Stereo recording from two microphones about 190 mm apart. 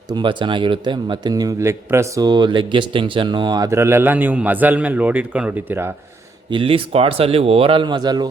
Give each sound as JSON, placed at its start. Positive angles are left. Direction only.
{"t": 0.1, "sound": "a man's voice", "side_deg": -25}
{"t": 6.5, "sound": "speech", "side_deg": -30}